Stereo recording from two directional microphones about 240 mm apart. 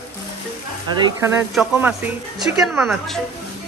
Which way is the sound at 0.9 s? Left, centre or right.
Centre.